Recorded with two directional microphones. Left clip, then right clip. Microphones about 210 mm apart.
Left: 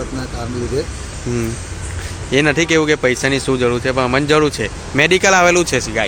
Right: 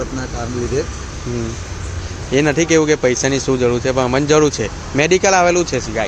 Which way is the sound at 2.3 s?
5° right (ahead or behind).